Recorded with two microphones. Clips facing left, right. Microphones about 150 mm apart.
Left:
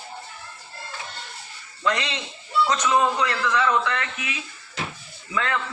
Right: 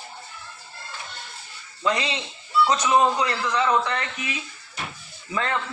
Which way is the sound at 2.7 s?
15° right (ahead or behind).